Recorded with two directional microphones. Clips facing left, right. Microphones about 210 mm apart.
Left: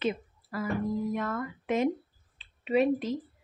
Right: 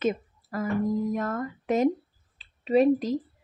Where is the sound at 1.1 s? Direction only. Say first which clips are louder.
Right 3 dB; 40° right (ahead or behind).